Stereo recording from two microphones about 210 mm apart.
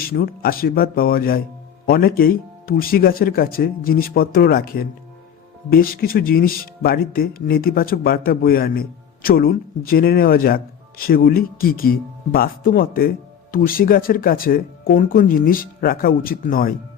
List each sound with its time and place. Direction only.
0.0 s speech: 45° left (ahead or behind)